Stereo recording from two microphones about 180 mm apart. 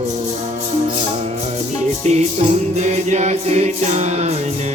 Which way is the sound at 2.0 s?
35° right (ahead or behind).